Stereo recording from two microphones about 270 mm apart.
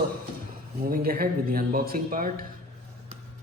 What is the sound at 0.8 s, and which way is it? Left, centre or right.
Speech, right.